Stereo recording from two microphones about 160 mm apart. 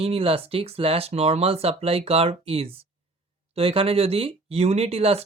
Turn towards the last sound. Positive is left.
turn(degrees=-40)  # may be behind; listen again after turning